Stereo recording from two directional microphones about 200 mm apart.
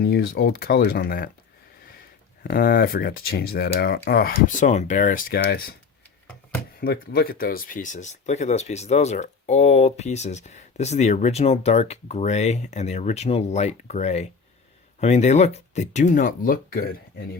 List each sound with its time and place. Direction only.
0.0 s speech: 50° left (ahead or behind)
2.4 s speech: 50° left (ahead or behind)
5.4 s speech: 50° left (ahead or behind)
6.7 s speech: 50° left (ahead or behind)